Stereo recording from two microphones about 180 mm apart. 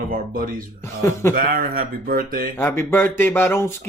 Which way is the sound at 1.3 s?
55° right (ahead or behind).